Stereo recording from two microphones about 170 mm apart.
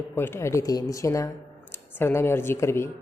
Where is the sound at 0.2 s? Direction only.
15° left (ahead or behind).